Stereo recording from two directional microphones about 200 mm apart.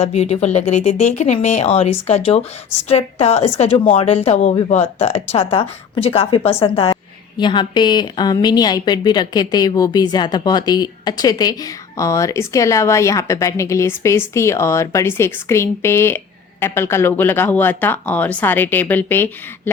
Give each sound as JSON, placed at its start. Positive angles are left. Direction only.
{"t": 0.0, "sound": "a woman's voice", "side_deg": 30}